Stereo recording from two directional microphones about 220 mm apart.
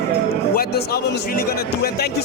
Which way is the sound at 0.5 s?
45° left (ahead or behind).